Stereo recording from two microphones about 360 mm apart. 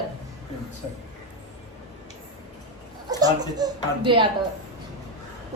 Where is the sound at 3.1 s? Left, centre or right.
Centre.